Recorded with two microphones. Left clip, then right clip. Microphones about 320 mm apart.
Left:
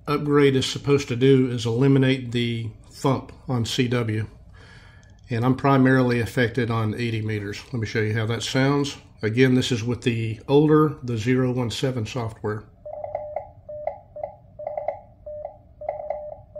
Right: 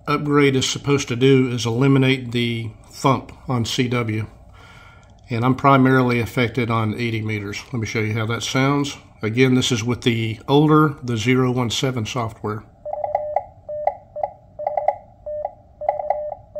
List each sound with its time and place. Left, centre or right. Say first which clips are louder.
0.0 s speech: right 2 dB; centre
5.3 s speech: right 5 dB; centre
14.6 s telephone dialing: right 8 dB; right